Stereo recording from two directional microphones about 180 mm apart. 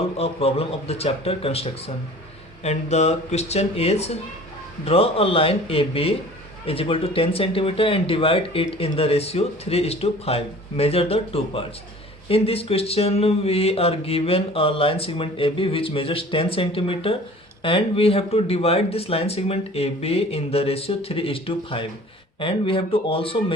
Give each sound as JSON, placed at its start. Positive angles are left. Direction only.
{"t": 0.2, "sound": "speech", "side_deg": 35}